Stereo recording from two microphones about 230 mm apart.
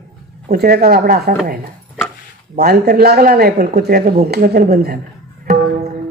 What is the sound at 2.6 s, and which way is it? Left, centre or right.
Speech, right.